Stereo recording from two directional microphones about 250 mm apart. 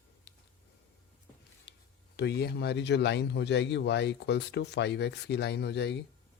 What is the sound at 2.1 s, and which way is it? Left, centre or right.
Speech, left.